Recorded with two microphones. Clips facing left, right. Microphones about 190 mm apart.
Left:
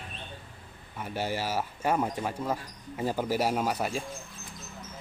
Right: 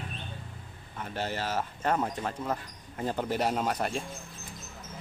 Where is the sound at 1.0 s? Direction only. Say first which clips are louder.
Left 2 dB; 10° left (ahead or behind).